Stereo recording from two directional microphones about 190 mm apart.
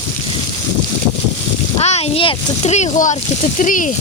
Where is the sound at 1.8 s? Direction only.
35° left (ahead or behind).